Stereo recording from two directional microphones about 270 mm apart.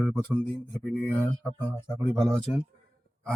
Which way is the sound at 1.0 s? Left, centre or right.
Centre.